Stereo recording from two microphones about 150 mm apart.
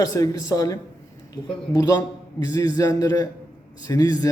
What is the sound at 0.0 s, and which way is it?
A man's voice, 20° left (ahead or behind).